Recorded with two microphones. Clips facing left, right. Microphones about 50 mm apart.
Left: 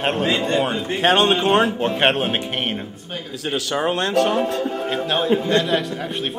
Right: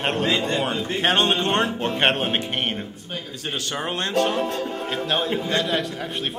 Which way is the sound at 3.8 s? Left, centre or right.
Centre.